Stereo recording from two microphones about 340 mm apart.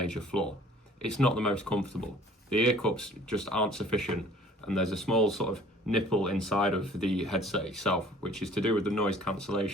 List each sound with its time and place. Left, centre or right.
0.1 s speech: centre